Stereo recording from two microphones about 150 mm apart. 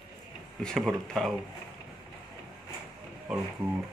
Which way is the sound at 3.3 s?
5° right (ahead or behind).